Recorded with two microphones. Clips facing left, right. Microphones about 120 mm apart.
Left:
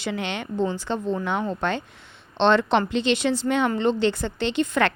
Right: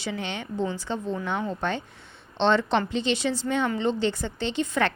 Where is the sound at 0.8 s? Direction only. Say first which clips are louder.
Left 4 dB; 70° left (ahead or behind).